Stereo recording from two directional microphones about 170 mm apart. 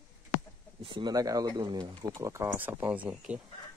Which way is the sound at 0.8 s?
30° right (ahead or behind).